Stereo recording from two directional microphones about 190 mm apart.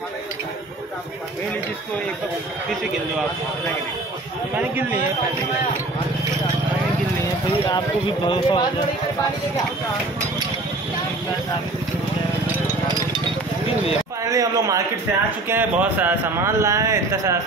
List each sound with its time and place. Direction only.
8.3 s speech: 25° left (ahead or behind)
14.2 s a man's voice: 15° right (ahead or behind)